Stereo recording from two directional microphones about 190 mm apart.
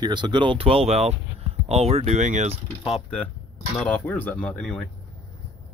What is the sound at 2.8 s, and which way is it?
Speech, centre (ahead or behind).